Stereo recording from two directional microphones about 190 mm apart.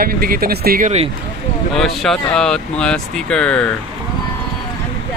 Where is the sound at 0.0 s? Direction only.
50° right (ahead or behind).